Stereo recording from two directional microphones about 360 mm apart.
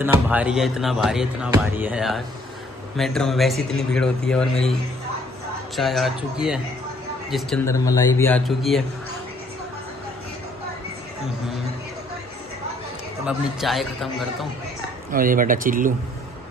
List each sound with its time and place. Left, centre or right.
0.0 s speech: centre
5.8 s speech: centre
13.2 s speech: centre
15.0 s speech: right